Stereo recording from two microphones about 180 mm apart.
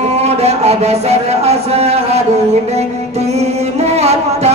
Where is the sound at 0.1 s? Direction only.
35° right (ahead or behind).